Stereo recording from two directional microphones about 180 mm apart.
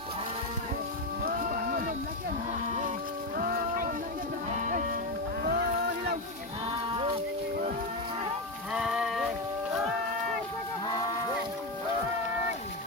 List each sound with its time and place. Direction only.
1.2 s music: 55° right (ahead or behind)
3.3 s music: 50° right (ahead or behind)
5.4 s boat: 60° right (ahead or behind)
6.7 s a sound: 30° right (ahead or behind)
8.7 s music: centre (ahead or behind)